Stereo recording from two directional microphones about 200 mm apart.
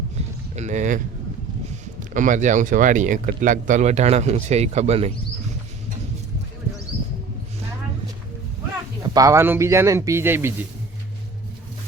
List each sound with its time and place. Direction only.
0.2 s a sound: 35° right (ahead or behind)
2.1 s speech: 40° right (ahead or behind)
9.0 s speech: 15° right (ahead or behind)